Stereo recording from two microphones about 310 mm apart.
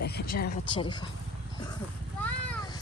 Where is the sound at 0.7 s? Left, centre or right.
Centre.